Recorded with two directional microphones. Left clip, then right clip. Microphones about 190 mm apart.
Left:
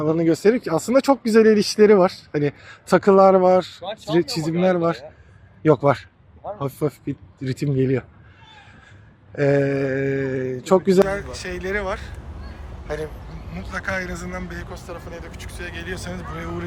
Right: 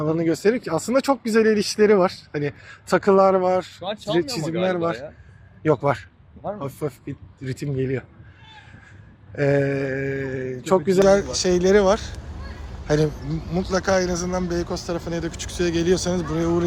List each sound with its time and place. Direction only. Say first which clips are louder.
0.0 s speech: left 3 dB; 15° left (ahead or behind)
9.3 s speech: left 2 dB; 10° left (ahead or behind)
11.1 s speech: right 9 dB; 25° right (ahead or behind)
13.5 s speech: right 6 dB; 20° right (ahead or behind)
14.7 s speech: right 7 dB; 35° right (ahead or behind)